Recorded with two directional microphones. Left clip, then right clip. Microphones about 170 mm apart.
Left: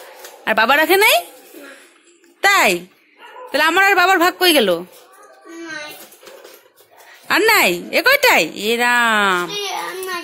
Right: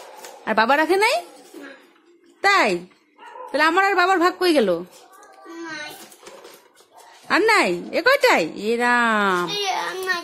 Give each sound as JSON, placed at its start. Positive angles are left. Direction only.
{"t": 0.4, "sound": "speech", "side_deg": 5}
{"t": 2.4, "sound": "speech", "side_deg": 0}
{"t": 7.2, "sound": "speech", "side_deg": 0}
{"t": 9.8, "sound": "child singing", "side_deg": 25}